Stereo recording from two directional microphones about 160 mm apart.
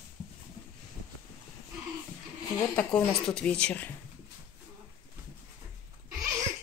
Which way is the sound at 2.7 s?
10° left (ahead or behind).